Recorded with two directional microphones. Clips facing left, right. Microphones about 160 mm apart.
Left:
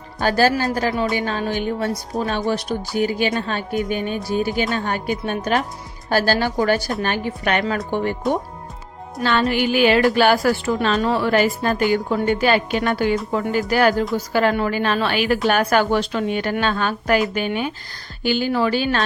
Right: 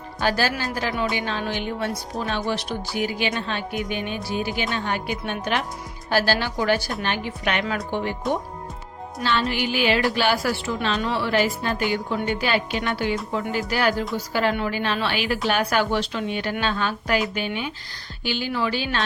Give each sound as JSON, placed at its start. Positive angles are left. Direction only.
{"t": 0.2, "sound": "a woman's voice", "side_deg": 45}
{"t": 8.2, "sound": "speech", "side_deg": 0}
{"t": 9.2, "sound": "a woman's voice", "side_deg": 50}